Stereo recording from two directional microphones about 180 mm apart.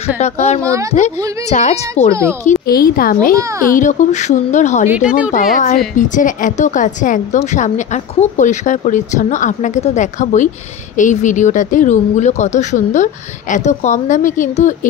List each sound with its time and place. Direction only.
0.2 s speech: 40° left (ahead or behind)
0.6 s speech: 15° right (ahead or behind)
0.9 s speech: 40° left (ahead or behind)
2.6 s speech: 55° left (ahead or behind)
3.3 s speech: 15° right (ahead or behind)
3.7 s speech: 45° left (ahead or behind)
4.8 s speech: 10° right (ahead or behind)
5.3 s speech: 45° left (ahead or behind)